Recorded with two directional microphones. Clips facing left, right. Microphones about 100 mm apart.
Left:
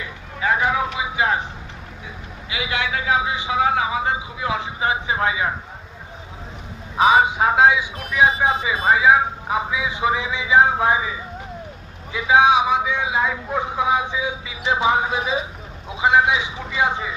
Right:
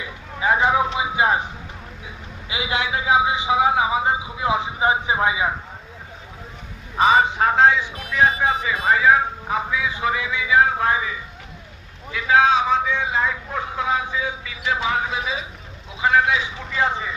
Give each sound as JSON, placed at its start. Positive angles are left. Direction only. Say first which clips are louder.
{"t": 0.3, "sound": "a sound", "louder": "right 2 dB", "side_deg": -20}
{"t": 2.5, "sound": "a man's voice", "louder": "right 1 dB", "side_deg": -20}
{"t": 6.9, "sound": "a man's voice", "louder": "left 1 dB", "side_deg": 10}